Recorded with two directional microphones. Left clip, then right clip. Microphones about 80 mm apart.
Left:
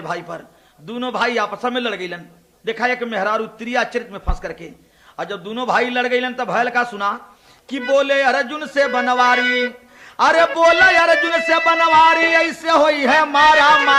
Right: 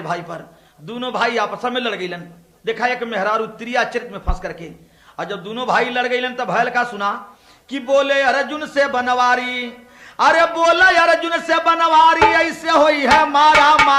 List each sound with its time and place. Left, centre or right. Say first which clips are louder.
0.0 s a man's voice: right 1 dB; right